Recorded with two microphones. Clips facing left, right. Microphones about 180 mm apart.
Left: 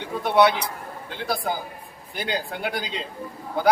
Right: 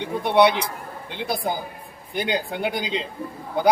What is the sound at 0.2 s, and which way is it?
Speech, 20° right (ahead or behind).